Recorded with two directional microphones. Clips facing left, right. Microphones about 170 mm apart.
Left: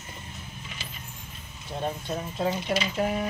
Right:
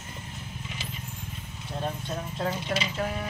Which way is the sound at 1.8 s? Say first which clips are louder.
Left 2 dB; 10° left (ahead or behind).